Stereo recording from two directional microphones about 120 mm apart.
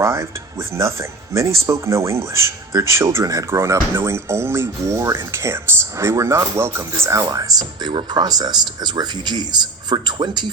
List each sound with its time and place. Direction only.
0.0 s speech: 20° right (ahead or behind); by 10.5 s 40° right (ahead or behind)